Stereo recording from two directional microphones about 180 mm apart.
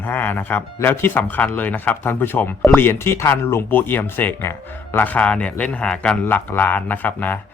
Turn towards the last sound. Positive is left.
turn(degrees=10)  # may be behind; listen again after turning